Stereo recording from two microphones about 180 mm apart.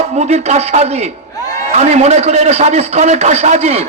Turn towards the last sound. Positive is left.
turn(degrees=-35)  # may be behind; listen again after turning